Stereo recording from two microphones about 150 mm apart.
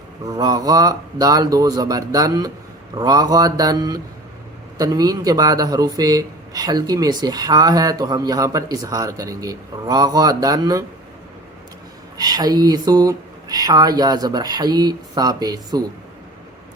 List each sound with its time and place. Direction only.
0.3 s speech: 25° right (ahead or behind)
12.1 s speech: 25° right (ahead or behind)